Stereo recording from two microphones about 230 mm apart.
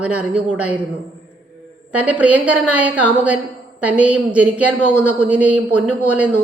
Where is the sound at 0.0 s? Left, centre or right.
Centre.